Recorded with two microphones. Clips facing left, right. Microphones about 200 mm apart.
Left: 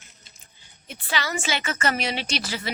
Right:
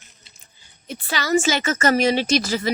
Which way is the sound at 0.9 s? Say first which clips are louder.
Right 7 dB; 40° right (ahead or behind).